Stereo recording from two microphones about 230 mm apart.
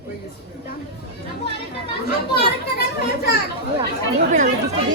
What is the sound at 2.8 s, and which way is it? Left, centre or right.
Children playing, left.